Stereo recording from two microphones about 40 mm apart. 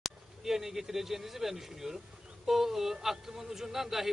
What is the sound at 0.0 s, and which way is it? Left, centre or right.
A man's voice, centre.